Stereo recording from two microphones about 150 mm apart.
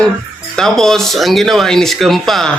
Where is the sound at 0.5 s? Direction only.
5° left (ahead or behind).